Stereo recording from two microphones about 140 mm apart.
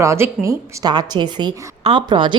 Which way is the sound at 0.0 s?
20° right (ahead or behind).